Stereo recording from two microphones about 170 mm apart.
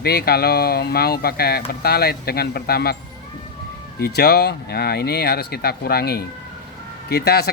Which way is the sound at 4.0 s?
70° left (ahead or behind).